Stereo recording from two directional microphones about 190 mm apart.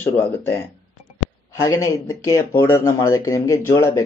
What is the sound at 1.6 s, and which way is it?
Speech, 15° left (ahead or behind).